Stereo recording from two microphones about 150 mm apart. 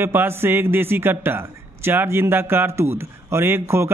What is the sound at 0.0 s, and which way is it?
A man's voice, 15° right (ahead or behind).